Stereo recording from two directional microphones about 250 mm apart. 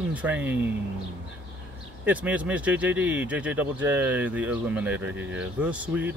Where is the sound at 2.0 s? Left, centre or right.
Centre.